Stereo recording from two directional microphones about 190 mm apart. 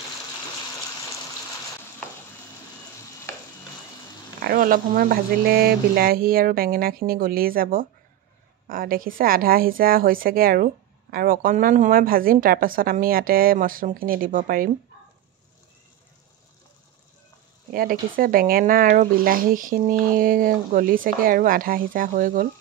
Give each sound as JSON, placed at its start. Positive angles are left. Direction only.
{"t": 4.4, "sound": "a woman's voice", "side_deg": -50}
{"t": 17.7, "sound": "a woman's voice", "side_deg": -50}